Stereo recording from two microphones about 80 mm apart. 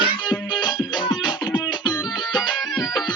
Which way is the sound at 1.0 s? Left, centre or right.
Left.